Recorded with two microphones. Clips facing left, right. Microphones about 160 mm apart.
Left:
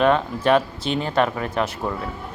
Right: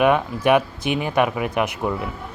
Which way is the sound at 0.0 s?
15° right (ahead or behind).